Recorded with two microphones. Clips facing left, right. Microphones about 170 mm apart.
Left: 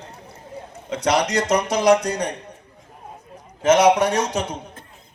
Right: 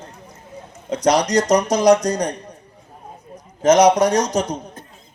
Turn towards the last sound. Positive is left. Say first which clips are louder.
# right 4 dB
turn(degrees=-40)  # may be behind; listen again after turning